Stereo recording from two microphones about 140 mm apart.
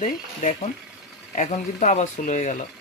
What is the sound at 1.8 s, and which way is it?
Speech, 60° left (ahead or behind).